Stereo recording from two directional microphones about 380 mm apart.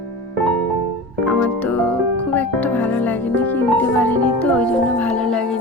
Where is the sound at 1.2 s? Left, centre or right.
Centre.